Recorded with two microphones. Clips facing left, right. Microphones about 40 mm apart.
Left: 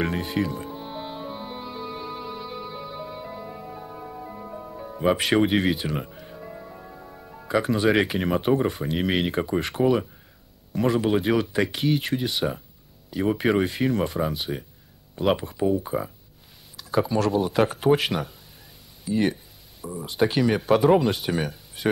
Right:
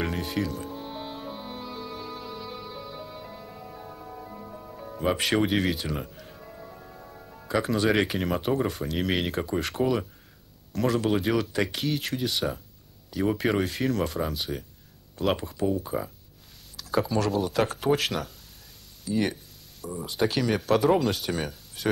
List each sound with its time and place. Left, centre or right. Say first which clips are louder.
0.0 s music: left 3 dB; centre
5.8 s speech: left 3 dB; centre
15.2 s speech: left 3 dB; centre
19.0 s a sound: left 3 dB; centre
20.0 s speech: left 4 dB; centre